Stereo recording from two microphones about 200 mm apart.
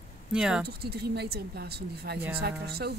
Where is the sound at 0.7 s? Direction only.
50° right (ahead or behind).